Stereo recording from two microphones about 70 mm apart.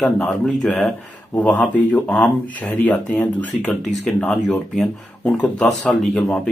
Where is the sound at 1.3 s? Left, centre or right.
Left.